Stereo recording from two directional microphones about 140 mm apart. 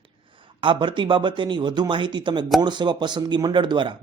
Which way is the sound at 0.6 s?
35° right (ahead or behind).